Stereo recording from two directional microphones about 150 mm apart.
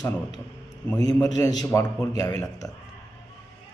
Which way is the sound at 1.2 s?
25° left (ahead or behind).